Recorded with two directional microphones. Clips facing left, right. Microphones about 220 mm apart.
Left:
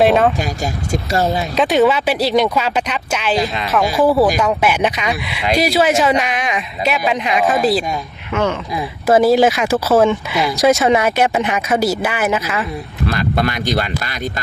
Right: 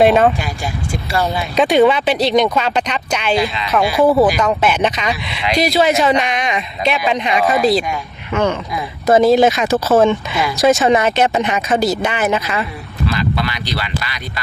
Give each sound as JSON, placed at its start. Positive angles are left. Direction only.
{"t": 0.0, "sound": "speech", "side_deg": 0}
{"t": 1.1, "sound": "speech", "side_deg": 40}
{"t": 1.5, "sound": "speech", "side_deg": 0}
{"t": 3.3, "sound": "speech", "side_deg": 40}
{"t": 4.0, "sound": "speech", "side_deg": 5}
{"t": 13.1, "sound": "speech", "side_deg": 50}